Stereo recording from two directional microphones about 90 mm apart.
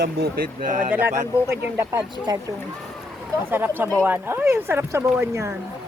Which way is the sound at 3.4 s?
25° right (ahead or behind).